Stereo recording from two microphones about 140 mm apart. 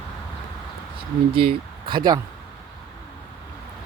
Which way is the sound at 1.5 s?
35° right (ahead or behind).